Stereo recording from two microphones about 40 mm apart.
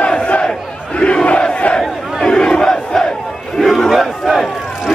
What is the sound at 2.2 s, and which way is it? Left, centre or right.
Crowd, centre.